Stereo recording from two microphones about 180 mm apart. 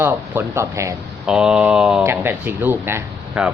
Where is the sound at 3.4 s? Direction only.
5° right (ahead or behind).